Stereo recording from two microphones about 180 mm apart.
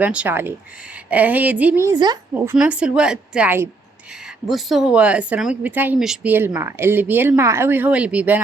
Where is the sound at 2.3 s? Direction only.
10° right (ahead or behind).